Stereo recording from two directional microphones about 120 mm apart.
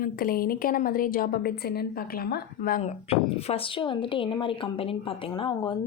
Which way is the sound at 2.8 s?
55° left (ahead or behind).